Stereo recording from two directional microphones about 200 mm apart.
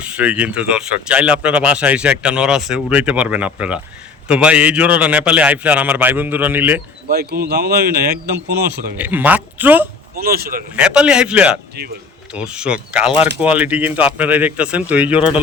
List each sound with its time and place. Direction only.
0.0 s a man's voice: 5° right (ahead or behind)
7.1 s speech: 50° right (ahead or behind)
9.0 s a man's voice: 10° right (ahead or behind)
10.2 s speech: 50° right (ahead or behind)
10.8 s a man's voice: 5° right (ahead or behind)